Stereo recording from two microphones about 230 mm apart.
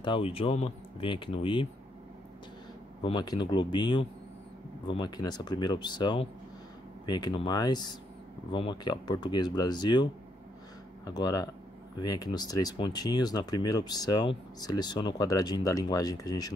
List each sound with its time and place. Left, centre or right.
0.0 s speech: left
3.0 s speech: centre
11.1 s speech: centre